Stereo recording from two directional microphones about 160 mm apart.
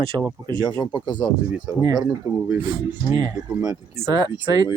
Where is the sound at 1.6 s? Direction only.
25° right (ahead or behind).